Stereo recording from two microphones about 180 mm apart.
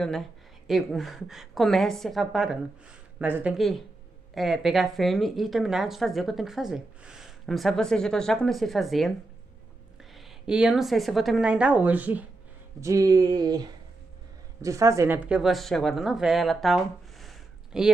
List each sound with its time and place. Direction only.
0.7 s speech: centre (ahead or behind)
3.5 s speech: centre (ahead or behind)
10.1 s speech: 5° right (ahead or behind); by 13.6 s 20° right (ahead or behind)
14.6 s speech: 15° right (ahead or behind); by 17.9 s centre (ahead or behind)